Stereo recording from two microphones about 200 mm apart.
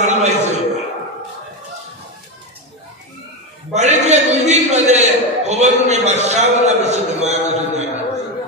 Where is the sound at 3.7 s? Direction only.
35° right (ahead or behind).